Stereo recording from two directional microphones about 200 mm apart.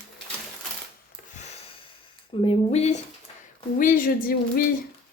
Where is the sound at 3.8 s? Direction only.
45° left (ahead or behind).